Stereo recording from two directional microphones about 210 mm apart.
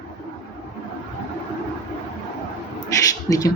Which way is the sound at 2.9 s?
15° left (ahead or behind).